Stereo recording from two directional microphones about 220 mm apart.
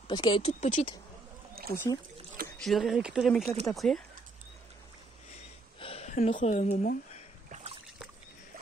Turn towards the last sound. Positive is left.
turn(degrees=-35)  # may be behind; listen again after turning